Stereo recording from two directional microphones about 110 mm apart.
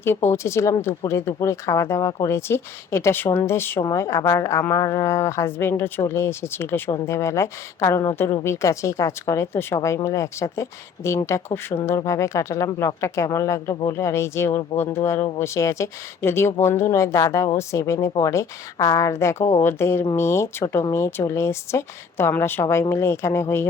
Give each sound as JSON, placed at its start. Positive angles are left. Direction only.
{"t": 0.0, "sound": "a woman's voice", "side_deg": 20}